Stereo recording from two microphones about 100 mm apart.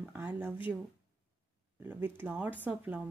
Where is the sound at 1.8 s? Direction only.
15° right (ahead or behind).